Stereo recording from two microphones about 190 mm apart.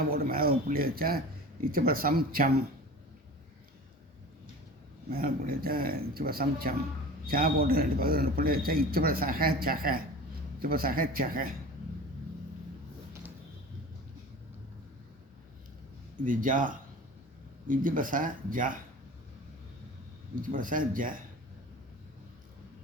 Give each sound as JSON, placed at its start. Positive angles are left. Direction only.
{"t": 0.1, "sound": "a man's voice", "side_deg": -50}
{"t": 5.1, "sound": "a man's voice", "side_deg": -50}
{"t": 16.2, "sound": "a man's voice", "side_deg": -45}
{"t": 20.4, "sound": "a man's voice", "side_deg": -45}